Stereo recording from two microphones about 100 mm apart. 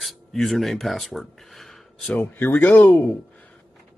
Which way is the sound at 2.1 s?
20° left (ahead or behind).